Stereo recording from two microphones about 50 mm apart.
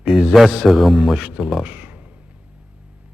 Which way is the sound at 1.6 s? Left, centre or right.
Right.